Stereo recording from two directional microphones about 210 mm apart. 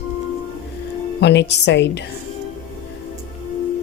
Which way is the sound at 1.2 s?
55° left (ahead or behind).